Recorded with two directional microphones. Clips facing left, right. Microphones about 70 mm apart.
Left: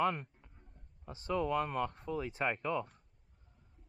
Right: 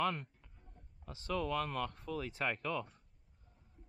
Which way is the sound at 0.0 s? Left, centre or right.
Centre.